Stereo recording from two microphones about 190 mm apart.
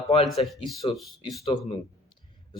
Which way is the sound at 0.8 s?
25° left (ahead or behind).